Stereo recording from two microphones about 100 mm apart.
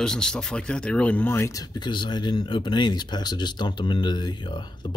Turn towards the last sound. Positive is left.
turn(degrees=50)  # may be behind; listen again after turning